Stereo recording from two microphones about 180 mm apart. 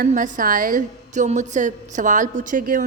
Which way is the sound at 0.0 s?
50° right (ahead or behind).